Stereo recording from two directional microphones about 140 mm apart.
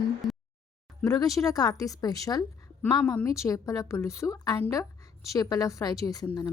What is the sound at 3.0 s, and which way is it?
A woman's voice, 20° left (ahead or behind).